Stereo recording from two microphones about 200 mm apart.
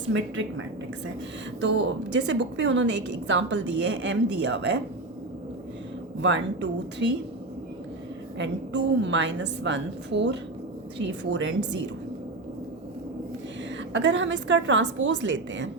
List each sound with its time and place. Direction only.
0.1 s a woman's voice: 70° right (ahead or behind)
1.6 s a woman's voice: 65° right (ahead or behind)
6.2 s a woman's voice: 65° right (ahead or behind)
8.4 s a woman's voice: 65° right (ahead or behind)
13.9 s a woman's voice: 65° right (ahead or behind)